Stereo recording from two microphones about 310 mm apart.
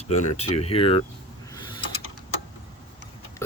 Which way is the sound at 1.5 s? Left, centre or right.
Centre.